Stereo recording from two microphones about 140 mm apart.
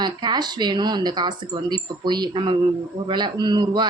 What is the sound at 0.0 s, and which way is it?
Speech, 30° right (ahead or behind).